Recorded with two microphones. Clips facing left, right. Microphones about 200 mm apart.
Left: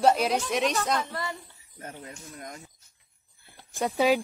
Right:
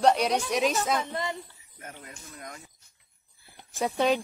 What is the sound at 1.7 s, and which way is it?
Speech, 35° left (ahead or behind).